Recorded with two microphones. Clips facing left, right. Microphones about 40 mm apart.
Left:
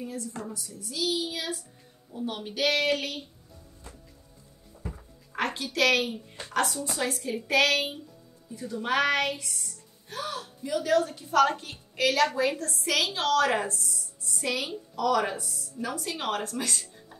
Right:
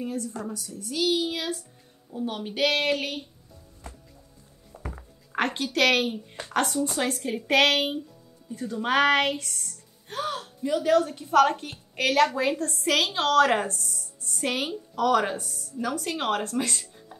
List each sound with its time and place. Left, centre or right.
0.0 s a woman's voice: right
2.1 s a woman's voice: centre
2.5 s a woman's voice: right
4.7 s a sound: right
7.0 s a woman's voice: right
8.5 s a woman's voice: right